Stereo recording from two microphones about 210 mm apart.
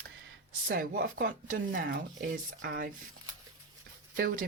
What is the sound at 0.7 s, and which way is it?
Speech, 40° right (ahead or behind).